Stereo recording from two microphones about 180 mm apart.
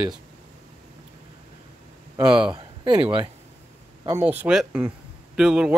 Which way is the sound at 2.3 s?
5° right (ahead or behind).